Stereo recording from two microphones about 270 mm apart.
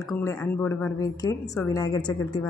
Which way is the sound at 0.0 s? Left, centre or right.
Centre.